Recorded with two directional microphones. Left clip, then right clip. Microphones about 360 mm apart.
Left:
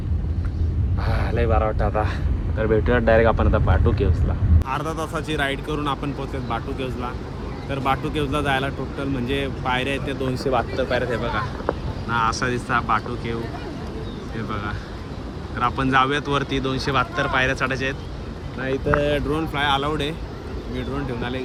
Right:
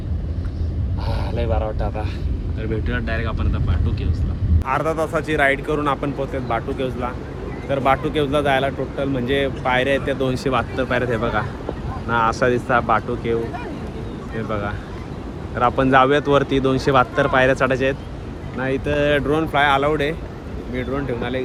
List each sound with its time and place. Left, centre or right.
1.4 s speech: centre
2.6 s speech: centre
4.6 s speech: centre
10.3 s speech: right; by 13.3 s centre
14.3 s speech: centre